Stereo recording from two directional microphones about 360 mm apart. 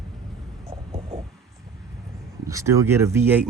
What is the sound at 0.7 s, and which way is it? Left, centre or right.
Hum, centre.